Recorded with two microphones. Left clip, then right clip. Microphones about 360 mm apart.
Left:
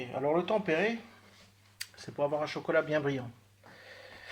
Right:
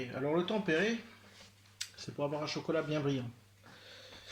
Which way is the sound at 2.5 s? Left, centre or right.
Centre.